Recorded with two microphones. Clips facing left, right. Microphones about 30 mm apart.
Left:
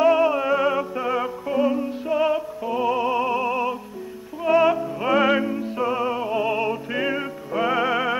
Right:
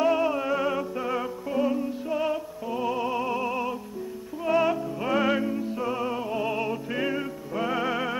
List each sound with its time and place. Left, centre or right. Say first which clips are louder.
0.0 s music: left 6 dB; centre
5.4 s music: left 4 dB; centre